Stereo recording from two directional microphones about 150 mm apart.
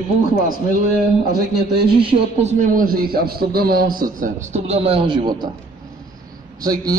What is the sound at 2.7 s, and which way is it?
A man's voice, 75° right (ahead or behind).